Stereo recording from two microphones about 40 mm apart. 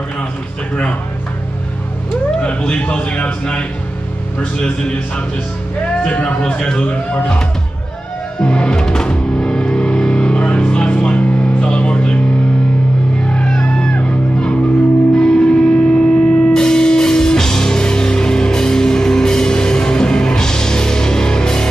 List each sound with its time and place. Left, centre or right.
2.7 s a man's voice: left
6.2 s a man's voice: left
8.4 s music: left
13.3 s music: centre
15.1 s music: left